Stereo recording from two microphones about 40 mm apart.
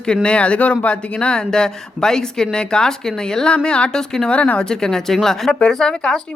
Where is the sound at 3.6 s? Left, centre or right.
Left.